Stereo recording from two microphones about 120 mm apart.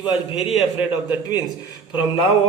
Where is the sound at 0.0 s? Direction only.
45° left (ahead or behind).